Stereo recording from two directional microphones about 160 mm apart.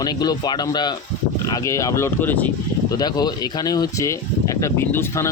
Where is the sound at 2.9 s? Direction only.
25° left (ahead or behind).